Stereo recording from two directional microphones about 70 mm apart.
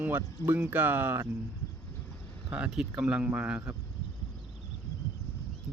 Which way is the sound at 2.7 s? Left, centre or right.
Centre.